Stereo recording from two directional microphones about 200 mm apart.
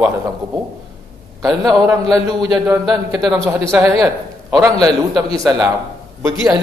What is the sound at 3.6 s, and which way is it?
A man's voice, 15° right (ahead or behind).